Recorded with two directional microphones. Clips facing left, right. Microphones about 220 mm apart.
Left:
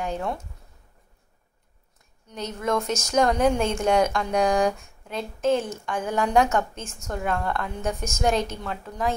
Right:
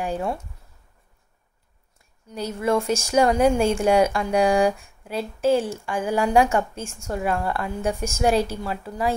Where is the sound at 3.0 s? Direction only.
10° right (ahead or behind).